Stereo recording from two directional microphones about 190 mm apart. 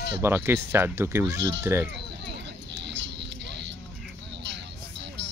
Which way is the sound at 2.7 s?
65° right (ahead or behind).